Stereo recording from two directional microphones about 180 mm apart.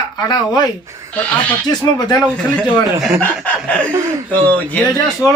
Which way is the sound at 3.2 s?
5° left (ahead or behind).